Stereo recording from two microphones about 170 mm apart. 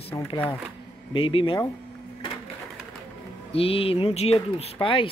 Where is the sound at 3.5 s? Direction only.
35° left (ahead or behind).